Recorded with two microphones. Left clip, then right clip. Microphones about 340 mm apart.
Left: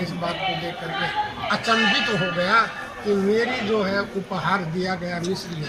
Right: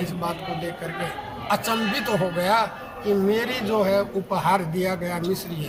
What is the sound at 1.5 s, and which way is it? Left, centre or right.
A man's voice, centre.